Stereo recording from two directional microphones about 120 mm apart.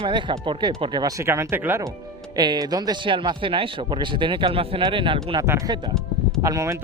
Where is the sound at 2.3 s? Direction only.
35° right (ahead or behind).